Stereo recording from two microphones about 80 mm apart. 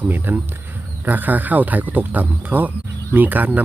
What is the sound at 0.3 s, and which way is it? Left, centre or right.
Speech, right.